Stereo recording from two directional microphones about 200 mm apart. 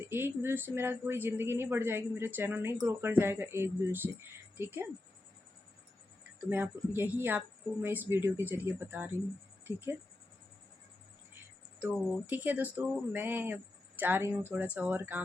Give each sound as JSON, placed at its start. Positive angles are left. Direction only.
{"t": 0.0, "sound": "speech", "side_deg": -10}
{"t": 6.4, "sound": "speech", "side_deg": -10}
{"t": 9.7, "sound": "speech", "side_deg": 20}
{"t": 11.8, "sound": "speech", "side_deg": -5}